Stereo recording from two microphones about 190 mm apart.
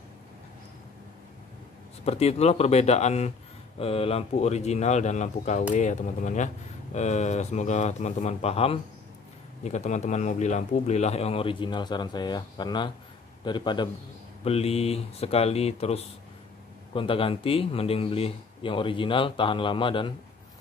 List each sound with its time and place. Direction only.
2.0 s speech: 35° left (ahead or behind)